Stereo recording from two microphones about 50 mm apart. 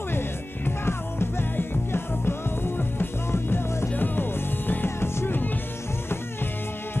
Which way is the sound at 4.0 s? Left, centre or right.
Left.